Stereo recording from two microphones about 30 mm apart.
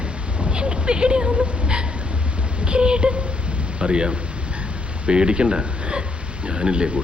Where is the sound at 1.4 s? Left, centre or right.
Right.